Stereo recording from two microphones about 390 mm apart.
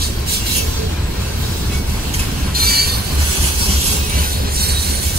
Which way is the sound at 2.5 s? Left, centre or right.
Right.